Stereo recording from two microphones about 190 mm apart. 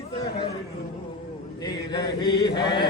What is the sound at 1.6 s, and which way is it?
Chant, 25° left (ahead or behind).